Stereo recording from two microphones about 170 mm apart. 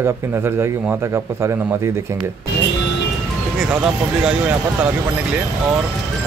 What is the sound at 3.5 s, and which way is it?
Speech, 5° right (ahead or behind).